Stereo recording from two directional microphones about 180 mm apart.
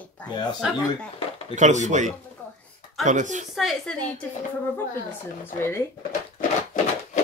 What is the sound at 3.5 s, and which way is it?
Speech, centre (ahead or behind).